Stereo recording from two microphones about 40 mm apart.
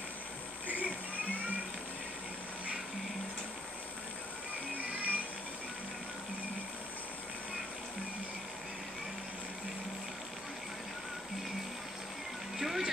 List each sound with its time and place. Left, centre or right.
0.7 s music: right
4.7 s music: right
12.5 s music: centre